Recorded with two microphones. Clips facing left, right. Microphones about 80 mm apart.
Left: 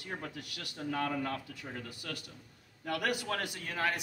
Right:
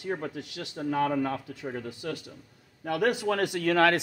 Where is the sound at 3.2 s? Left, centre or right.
Right.